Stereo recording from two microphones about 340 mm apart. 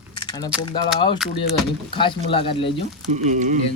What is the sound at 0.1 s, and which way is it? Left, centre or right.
Keys jangling, centre.